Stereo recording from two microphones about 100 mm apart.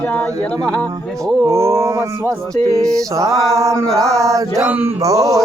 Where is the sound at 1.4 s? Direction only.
30° right (ahead or behind).